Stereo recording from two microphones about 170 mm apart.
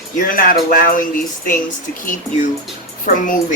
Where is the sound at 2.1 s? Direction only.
45° left (ahead or behind).